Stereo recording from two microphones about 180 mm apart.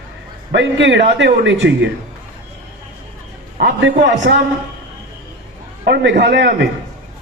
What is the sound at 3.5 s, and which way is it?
Speech, 60° right (ahead or behind).